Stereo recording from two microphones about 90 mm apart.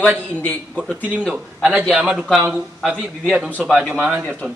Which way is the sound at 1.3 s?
15° right (ahead or behind).